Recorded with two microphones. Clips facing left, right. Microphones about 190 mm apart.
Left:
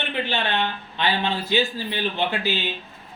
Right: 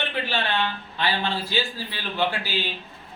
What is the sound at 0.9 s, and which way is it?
A man's voice, 20° left (ahead or behind).